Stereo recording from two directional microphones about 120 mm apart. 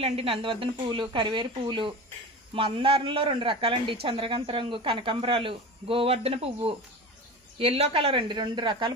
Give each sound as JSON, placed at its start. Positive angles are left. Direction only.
{"t": 0.0, "sound": "a man's voice", "side_deg": -55}